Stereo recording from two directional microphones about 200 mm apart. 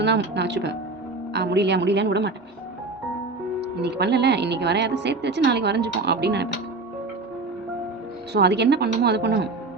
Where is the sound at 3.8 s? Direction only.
55° right (ahead or behind).